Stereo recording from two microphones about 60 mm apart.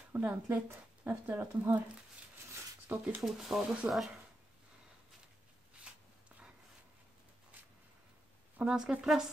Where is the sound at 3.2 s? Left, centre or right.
Right.